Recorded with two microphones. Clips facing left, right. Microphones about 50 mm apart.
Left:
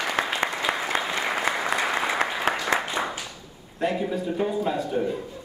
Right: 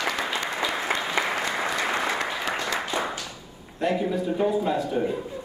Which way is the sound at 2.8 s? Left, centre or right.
Centre.